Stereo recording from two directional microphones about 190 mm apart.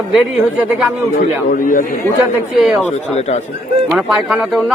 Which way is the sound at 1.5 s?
45° left (ahead or behind).